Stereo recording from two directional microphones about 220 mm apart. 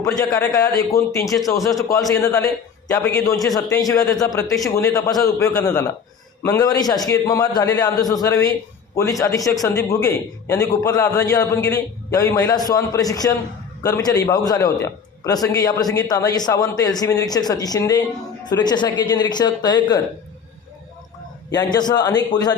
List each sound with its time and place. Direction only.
0.0 s a man's voice: 15° left (ahead or behind)
21.5 s speech: 20° left (ahead or behind)